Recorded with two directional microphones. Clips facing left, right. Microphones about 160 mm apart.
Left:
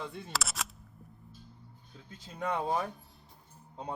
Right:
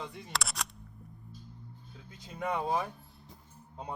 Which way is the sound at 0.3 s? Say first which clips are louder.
Right 1 dB; centre (ahead or behind).